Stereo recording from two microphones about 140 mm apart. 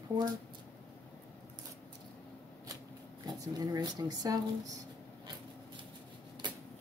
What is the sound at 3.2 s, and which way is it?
Speech, 25° right (ahead or behind).